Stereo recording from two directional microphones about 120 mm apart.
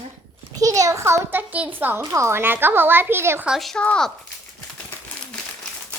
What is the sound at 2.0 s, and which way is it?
A woman's voice, 25° right (ahead or behind).